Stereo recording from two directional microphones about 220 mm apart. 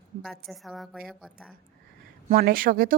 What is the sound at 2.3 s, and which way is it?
Speech, 40° right (ahead or behind).